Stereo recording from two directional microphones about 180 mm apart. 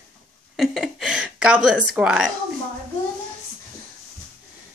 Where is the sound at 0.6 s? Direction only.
Centre (ahead or behind).